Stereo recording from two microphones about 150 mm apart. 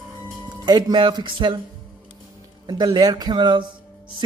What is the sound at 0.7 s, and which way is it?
Speech, 30° right (ahead or behind).